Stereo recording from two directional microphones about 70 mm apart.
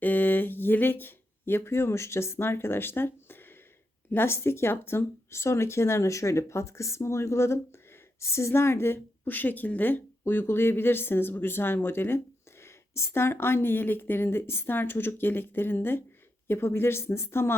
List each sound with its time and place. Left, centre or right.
0.0 s a woman's voice: left